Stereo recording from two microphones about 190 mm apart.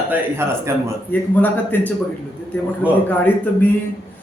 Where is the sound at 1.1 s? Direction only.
10° left (ahead or behind).